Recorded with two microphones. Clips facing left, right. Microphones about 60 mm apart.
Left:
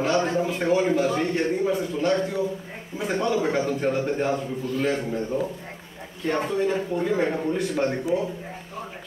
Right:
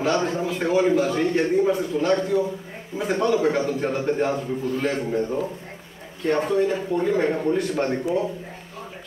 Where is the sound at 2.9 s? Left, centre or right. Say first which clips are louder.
Right 3 dB; centre.